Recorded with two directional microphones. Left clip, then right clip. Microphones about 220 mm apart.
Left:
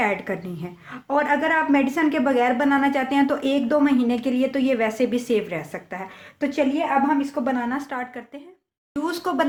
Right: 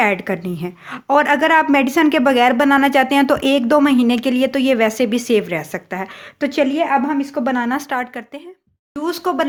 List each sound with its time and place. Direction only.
0.0 s a woman's voice: 35° right (ahead or behind)
9.0 s a woman's voice: 25° right (ahead or behind)